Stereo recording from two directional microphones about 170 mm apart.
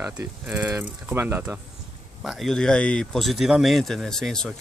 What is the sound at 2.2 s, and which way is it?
Speech, centre (ahead or behind).